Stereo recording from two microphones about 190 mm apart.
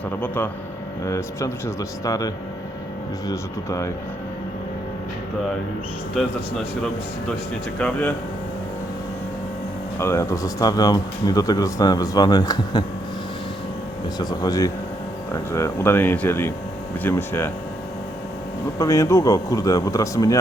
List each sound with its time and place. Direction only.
0.1 s speech: 10° left (ahead or behind)
6.2 s speech: centre (ahead or behind)
7.8 s speech: 5° left (ahead or behind)
10.0 s speech: 15° left (ahead or behind)
14.2 s speech: 20° left (ahead or behind)
18.8 s speech: 15° left (ahead or behind)